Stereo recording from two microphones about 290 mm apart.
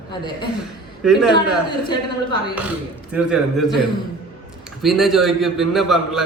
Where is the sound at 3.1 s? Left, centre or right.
Centre.